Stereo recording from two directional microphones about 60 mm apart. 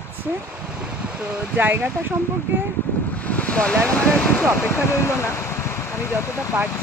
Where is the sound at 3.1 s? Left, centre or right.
Left.